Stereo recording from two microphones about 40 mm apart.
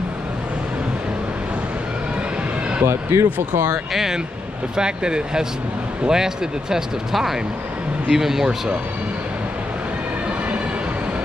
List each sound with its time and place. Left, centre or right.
2.8 s speech: right
3.3 s speech: right
4.7 s speech: right